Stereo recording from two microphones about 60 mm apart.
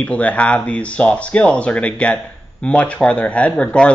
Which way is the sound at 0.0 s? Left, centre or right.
Left.